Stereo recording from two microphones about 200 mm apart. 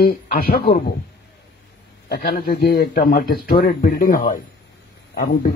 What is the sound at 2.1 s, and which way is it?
A man's voice, 50° left (ahead or behind).